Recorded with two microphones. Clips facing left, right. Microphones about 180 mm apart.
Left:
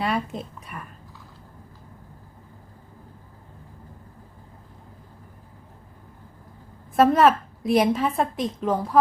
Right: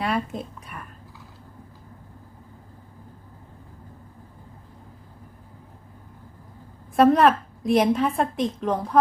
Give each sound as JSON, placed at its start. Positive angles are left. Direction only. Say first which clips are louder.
{"t": 0.0, "sound": "a woman's voice", "louder": "even", "side_deg": 0}
{"t": 6.9, "sound": "a woman's voice", "louder": "even", "side_deg": 0}